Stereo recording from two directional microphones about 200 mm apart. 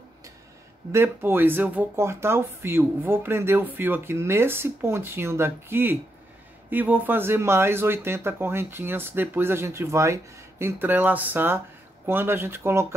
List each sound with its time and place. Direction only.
0.9 s speech: 10° right (ahead or behind)